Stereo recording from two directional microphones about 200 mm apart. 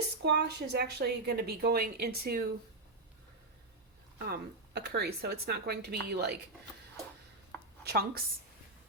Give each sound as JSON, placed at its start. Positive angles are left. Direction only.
{"t": 0.2, "sound": "speech", "side_deg": -60}
{"t": 4.2, "sound": "speech", "side_deg": -55}
{"t": 7.5, "sound": "a sound", "side_deg": 10}
{"t": 7.9, "sound": "speech", "side_deg": -50}